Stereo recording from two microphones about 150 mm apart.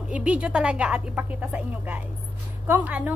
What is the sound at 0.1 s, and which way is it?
A woman's voice, 10° right (ahead or behind).